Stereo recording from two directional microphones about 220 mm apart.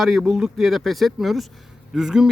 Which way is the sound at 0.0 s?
Centre (ahead or behind).